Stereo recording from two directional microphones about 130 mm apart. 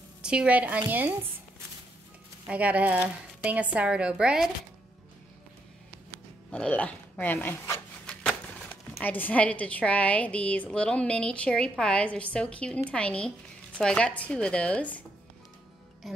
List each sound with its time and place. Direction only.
0.2 s a woman's voice: 5° right (ahead or behind)
2.4 s a woman's voice: 10° right (ahead or behind)
6.5 s a woman's voice: 10° left (ahead or behind)
8.1 s a sound: 10° left (ahead or behind)
9.0 s a woman's voice: 15° left (ahead or behind)